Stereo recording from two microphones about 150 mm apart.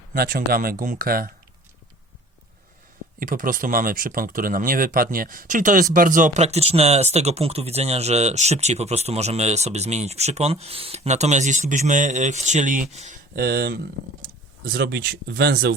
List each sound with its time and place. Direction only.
0.1 s speech: 80° right
3.2 s speech: 65° right (ahead or behind)
13.3 s speech: 90° right